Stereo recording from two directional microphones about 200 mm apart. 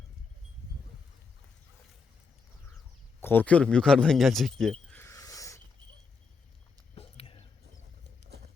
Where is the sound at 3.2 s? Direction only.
10° left (ahead or behind).